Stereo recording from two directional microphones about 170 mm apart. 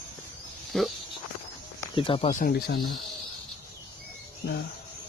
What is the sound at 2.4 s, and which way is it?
Speech, 65° left (ahead or behind).